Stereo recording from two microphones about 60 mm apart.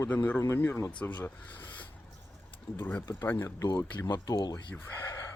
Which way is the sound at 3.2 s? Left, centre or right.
Left.